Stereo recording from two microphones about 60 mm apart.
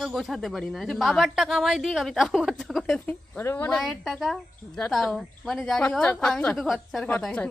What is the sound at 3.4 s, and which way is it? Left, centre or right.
Speech, left.